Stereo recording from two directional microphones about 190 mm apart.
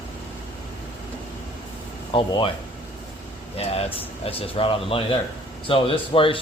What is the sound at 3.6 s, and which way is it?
Speech, 30° left (ahead or behind).